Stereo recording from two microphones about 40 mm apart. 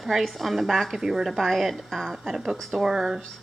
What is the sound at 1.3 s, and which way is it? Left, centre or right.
Speech, centre.